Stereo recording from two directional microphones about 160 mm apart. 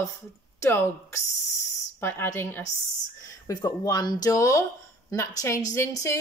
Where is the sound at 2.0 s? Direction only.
15° left (ahead or behind).